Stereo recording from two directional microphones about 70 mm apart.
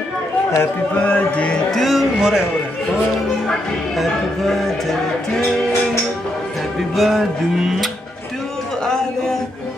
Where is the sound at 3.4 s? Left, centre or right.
Centre.